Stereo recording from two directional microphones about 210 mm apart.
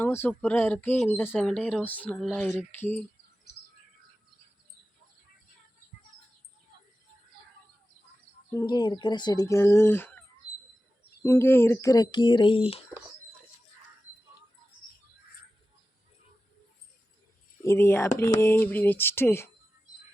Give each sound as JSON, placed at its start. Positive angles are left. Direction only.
{"t": 0.0, "sound": "speech", "side_deg": 10}
{"t": 8.5, "sound": "speech", "side_deg": 20}
{"t": 17.6, "sound": "speech", "side_deg": 10}